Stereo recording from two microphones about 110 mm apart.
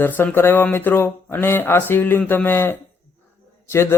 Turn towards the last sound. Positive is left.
turn(degrees=25)  # may be behind; listen again after turning